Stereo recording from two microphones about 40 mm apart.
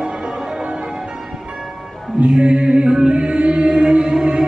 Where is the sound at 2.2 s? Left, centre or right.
Right.